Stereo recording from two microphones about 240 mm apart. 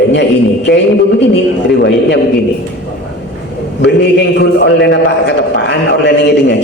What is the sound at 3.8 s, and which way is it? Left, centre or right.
A man's voice, left.